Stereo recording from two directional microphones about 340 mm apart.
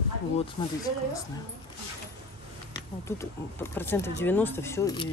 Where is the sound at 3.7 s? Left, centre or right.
Centre.